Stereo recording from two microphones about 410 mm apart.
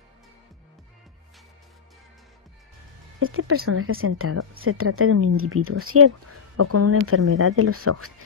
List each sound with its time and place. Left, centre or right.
3.2 s speech: right